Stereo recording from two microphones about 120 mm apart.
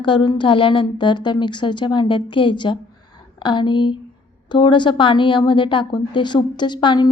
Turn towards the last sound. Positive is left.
turn(degrees=40)  # may be behind; listen again after turning